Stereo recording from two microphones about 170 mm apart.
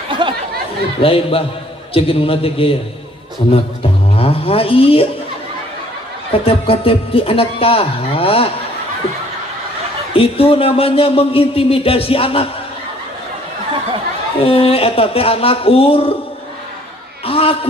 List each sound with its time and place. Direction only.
0.2 s chatter: 30° right (ahead or behind)
1.0 s a man's voice: 35° left (ahead or behind)
6.4 s a man's voice: 35° left (ahead or behind)
10.1 s a man's voice: 35° left (ahead or behind)
14.4 s a man's voice: 35° left (ahead or behind)
17.3 s a sound: 35° left (ahead or behind)